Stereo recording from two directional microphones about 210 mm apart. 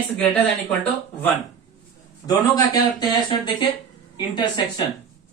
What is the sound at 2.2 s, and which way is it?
Speech, 20° left (ahead or behind).